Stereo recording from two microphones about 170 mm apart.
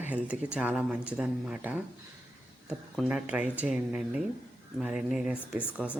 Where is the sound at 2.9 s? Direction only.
5° right (ahead or behind).